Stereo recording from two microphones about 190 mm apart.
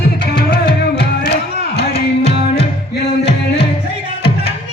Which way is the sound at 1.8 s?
30° left (ahead or behind).